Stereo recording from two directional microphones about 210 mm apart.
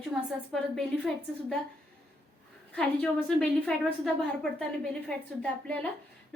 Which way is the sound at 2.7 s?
5° left (ahead or behind).